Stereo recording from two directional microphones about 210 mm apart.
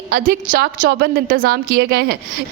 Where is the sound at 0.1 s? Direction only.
40° right (ahead or behind).